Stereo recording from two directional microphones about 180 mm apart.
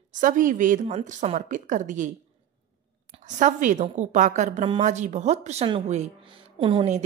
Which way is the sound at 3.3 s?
45° right (ahead or behind).